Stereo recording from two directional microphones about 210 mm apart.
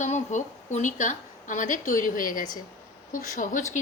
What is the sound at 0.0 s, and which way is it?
A woman's voice, 35° left (ahead or behind).